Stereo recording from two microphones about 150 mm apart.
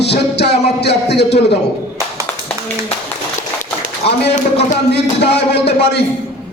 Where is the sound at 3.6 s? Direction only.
55° left (ahead or behind).